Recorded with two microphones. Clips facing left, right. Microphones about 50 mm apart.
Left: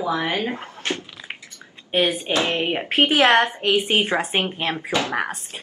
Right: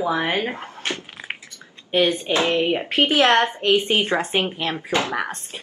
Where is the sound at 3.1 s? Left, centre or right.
Centre.